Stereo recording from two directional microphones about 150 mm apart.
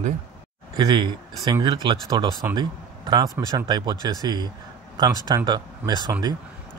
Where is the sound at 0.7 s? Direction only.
30° right (ahead or behind).